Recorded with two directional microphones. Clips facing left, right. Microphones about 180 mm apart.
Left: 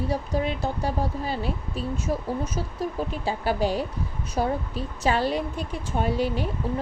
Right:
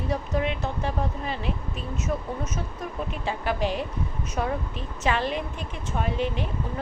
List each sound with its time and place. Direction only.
0.1 s speech: 35° left (ahead or behind)